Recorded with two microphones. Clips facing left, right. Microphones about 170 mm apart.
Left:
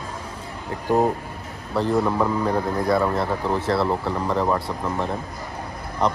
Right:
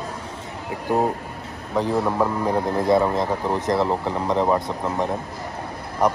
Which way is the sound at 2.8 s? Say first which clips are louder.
Right 3 dB; 20° right (ahead or behind).